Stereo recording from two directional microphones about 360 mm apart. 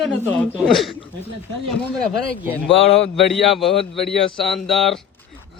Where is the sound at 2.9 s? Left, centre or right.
Centre.